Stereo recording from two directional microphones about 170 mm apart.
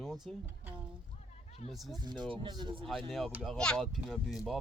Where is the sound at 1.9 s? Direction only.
25° right (ahead or behind).